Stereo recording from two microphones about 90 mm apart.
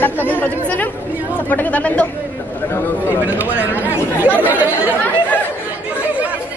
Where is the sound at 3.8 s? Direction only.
20° right (ahead or behind).